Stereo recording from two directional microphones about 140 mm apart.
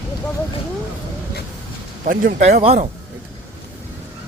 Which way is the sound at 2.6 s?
45° right (ahead or behind).